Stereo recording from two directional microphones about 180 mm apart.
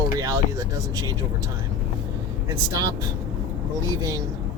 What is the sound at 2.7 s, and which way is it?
Speech, 20° right (ahead or behind).